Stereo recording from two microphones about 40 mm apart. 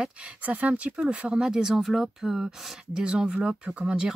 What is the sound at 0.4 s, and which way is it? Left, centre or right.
Speech, right.